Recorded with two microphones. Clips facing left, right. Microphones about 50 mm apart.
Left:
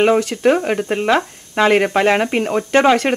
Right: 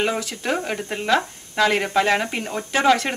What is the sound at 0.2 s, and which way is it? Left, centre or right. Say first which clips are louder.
Speech: left 10 dB; left.